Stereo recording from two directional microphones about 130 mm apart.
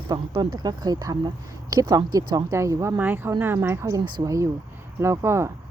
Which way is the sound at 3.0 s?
15° right (ahead or behind).